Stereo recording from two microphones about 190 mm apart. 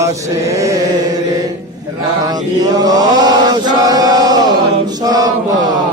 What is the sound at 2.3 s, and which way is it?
Chant, 20° right (ahead or behind).